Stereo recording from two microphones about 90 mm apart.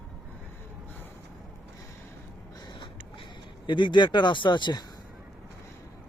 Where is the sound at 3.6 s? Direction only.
60° left (ahead or behind).